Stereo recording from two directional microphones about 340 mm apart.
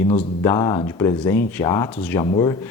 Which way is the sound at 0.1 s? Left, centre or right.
Centre.